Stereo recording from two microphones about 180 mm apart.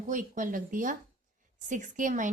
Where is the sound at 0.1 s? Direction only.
45° right (ahead or behind).